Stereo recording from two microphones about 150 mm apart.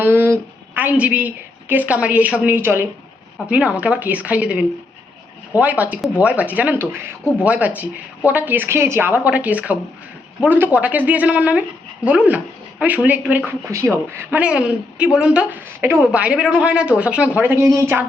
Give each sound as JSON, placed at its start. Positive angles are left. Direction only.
{"t": 0.0, "sound": "a sound", "side_deg": -15}
{"t": 1.7, "sound": "a woman's voice", "side_deg": -10}
{"t": 13.7, "sound": "a woman's voice", "side_deg": -20}